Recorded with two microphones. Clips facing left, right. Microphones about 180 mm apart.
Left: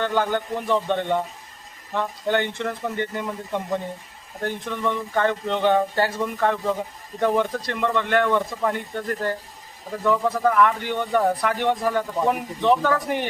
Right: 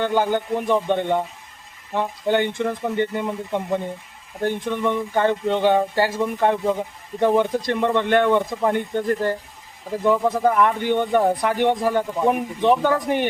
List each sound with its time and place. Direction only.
0.0 s speech: 15° right (ahead or behind)